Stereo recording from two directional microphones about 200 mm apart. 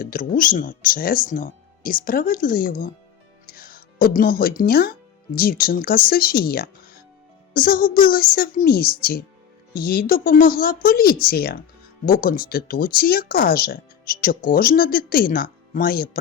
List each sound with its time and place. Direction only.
0.0 s speech: 45° left (ahead or behind)